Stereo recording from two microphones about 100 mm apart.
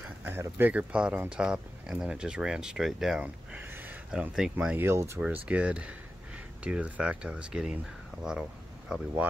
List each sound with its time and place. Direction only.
0.2 s speech: 20° right (ahead or behind)
3.7 s a sound: 15° right (ahead or behind)
4.4 s speech: 10° right (ahead or behind)
4.8 s speech: 30° right (ahead or behind)
5.2 s speech: 10° right (ahead or behind)